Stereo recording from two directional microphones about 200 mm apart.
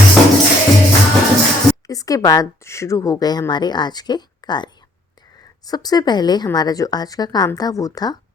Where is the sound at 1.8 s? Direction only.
15° left (ahead or behind).